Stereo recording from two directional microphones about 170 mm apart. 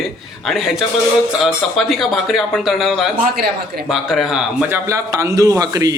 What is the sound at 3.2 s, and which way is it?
Speech, 70° right (ahead or behind).